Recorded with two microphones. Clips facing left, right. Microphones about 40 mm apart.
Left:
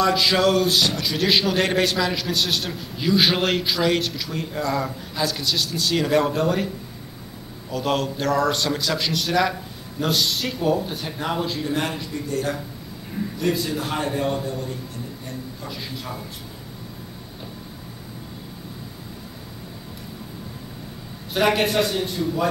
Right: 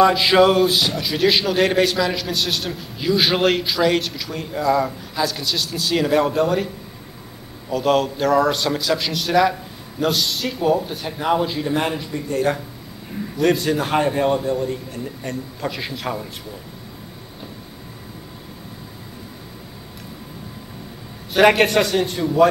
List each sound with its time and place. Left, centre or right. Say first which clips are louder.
0.2 s a man's voice: right 4 dB; centre
7.7 s a man's voice: right 5 dB; centre
12.3 s a man's voice: right 6 dB; right
13.4 s a man's voice: right 7 dB; right
13.8 s a man's voice: right 7 dB; right
15.2 s a man's voice: right 7 dB; right
21.4 s a man's voice: right 5 dB; right